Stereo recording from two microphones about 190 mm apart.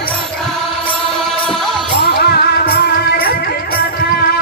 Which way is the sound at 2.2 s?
55° left (ahead or behind).